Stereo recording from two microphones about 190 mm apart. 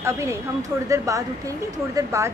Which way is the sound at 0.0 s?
15° right (ahead or behind).